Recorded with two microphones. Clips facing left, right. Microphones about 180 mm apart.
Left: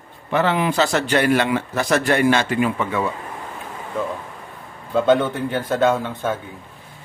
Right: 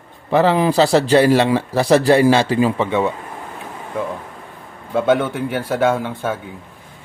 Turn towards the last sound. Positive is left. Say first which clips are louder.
# right 1 dB
turn(degrees=-10)  # may be behind; listen again after turning